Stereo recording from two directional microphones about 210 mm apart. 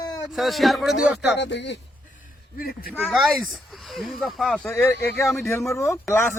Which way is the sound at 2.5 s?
45° left (ahead or behind).